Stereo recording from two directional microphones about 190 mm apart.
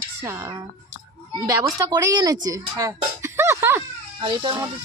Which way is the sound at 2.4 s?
20° right (ahead or behind).